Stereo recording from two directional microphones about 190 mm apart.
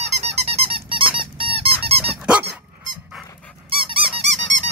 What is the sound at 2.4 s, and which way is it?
Dog, 40° right (ahead or behind).